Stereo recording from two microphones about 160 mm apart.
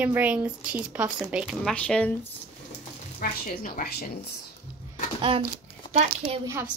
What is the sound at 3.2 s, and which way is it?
Speech, 65° left (ahead or behind).